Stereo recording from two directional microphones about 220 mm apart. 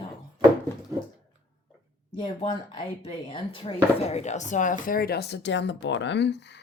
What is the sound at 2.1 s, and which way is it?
Speech, 20° left (ahead or behind).